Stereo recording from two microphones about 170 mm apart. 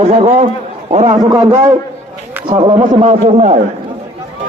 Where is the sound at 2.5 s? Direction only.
30° right (ahead or behind).